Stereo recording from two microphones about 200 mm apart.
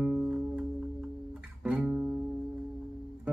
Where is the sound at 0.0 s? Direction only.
5° right (ahead or behind).